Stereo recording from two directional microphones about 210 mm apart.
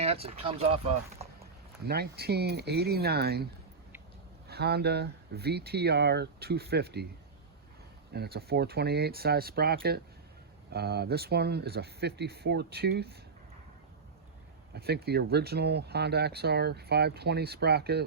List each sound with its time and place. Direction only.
0.0 s speech: 30° right (ahead or behind)
1.9 s speech: 50° right (ahead or behind)
8.1 s speech: 50° right (ahead or behind)
14.7 s speech: 50° right (ahead or behind)